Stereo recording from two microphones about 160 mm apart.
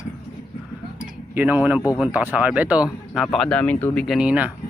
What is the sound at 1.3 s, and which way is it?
Speech, 10° right (ahead or behind).